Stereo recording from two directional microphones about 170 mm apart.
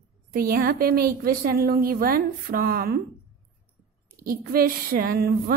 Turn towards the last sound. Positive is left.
turn(degrees=-60)  # may be behind; listen again after turning